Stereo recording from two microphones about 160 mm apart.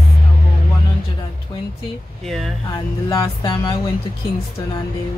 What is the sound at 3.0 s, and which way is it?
Music, 20° left (ahead or behind).